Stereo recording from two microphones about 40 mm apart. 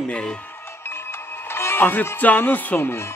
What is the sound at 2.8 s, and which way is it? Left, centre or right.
Speech, left.